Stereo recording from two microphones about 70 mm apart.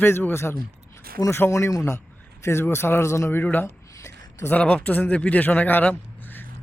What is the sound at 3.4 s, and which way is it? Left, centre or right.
Speech, left.